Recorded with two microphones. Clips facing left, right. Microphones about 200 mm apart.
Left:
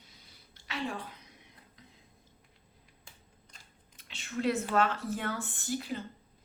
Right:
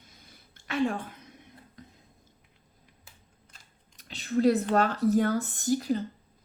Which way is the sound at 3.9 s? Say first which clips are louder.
Right 9 dB; 35° right (ahead or behind).